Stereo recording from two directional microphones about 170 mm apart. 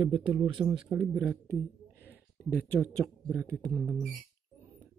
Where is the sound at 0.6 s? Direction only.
10° right (ahead or behind).